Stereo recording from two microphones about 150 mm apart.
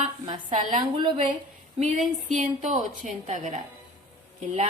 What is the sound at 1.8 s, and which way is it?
A woman's voice, 60° right (ahead or behind).